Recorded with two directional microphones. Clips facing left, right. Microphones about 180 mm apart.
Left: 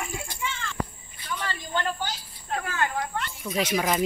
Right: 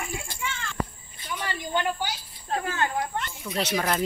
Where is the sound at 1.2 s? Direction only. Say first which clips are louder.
Right 1 dB; 15° right (ahead or behind).